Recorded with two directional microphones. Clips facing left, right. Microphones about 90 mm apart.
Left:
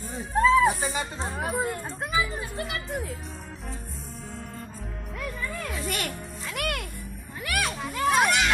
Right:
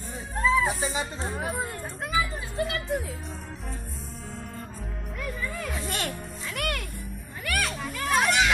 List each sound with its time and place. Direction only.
0.3 s a sound: 5° left (ahead or behind)
2.3 s speech: centre (ahead or behind)
5.8 s music: 30° right (ahead or behind)
6.4 s music: 5° left (ahead or behind)
7.4 s children playing: 5° left (ahead or behind)